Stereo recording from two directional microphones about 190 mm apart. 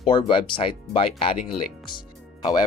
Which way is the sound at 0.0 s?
25° left (ahead or behind).